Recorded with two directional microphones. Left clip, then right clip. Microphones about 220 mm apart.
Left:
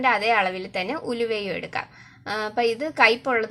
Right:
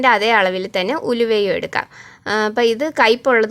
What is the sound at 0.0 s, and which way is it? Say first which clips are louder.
Speech: right 7 dB; 45° right (ahead or behind).